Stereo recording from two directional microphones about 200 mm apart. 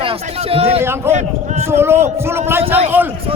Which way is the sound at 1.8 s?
10° right (ahead or behind).